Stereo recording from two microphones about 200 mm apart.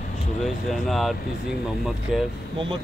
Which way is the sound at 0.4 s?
Centre (ahead or behind).